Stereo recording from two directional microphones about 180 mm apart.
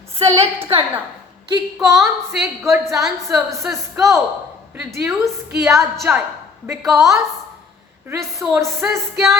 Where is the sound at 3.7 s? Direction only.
15° right (ahead or behind).